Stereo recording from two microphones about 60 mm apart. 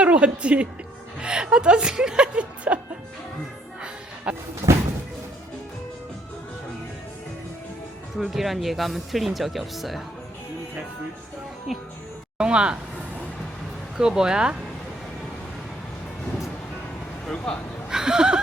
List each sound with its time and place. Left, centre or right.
0.0 s a woman's voice: centre
4.3 s speech: centre
8.1 s speech: centre
11.7 s speech: centre
12.4 s speech: centre
13.9 s speech: centre
17.2 s speech: centre
17.8 s speech: centre